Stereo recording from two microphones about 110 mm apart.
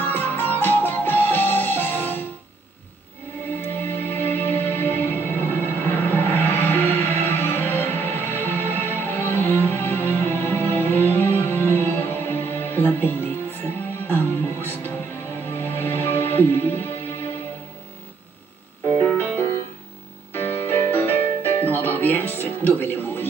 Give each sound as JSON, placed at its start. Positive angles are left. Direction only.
{"t": 0.0, "sound": "music", "side_deg": 15}
{"t": 3.8, "sound": "music", "side_deg": 20}
{"t": 19.0, "sound": "music", "side_deg": 15}